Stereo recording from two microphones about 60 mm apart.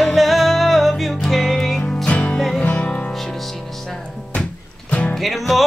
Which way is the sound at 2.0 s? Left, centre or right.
Centre.